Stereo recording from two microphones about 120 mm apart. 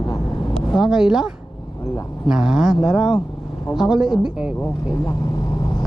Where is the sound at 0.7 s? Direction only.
5° right (ahead or behind).